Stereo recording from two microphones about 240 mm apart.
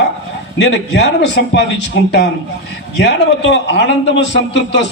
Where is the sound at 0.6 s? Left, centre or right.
Left.